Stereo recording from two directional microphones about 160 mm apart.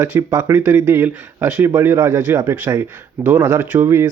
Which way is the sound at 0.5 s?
10° right (ahead or behind).